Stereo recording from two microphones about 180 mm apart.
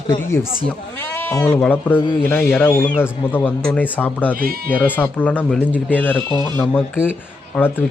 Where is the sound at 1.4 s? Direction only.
15° left (ahead or behind).